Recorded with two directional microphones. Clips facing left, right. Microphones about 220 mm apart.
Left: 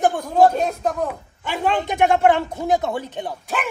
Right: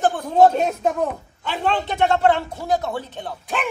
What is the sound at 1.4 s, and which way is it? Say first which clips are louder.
Speech: left 1 dB; 15° left (ahead or behind).